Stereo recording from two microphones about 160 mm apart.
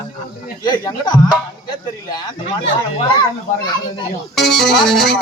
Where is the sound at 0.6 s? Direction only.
25° left (ahead or behind).